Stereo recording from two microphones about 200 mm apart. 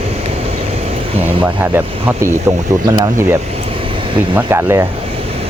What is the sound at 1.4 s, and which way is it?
Speech, 10° right (ahead or behind).